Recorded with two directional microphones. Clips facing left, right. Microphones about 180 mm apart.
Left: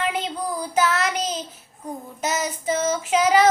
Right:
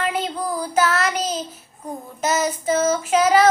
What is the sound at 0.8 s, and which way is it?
Child singing, 15° left (ahead or behind).